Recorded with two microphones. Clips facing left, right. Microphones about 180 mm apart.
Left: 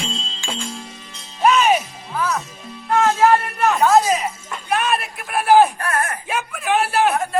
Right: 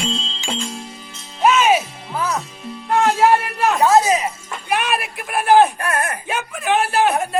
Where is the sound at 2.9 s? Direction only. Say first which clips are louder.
Even; 10° right (ahead or behind).